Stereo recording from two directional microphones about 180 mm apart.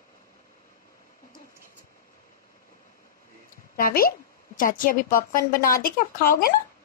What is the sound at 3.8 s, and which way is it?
A woman's voice, 55° left (ahead or behind).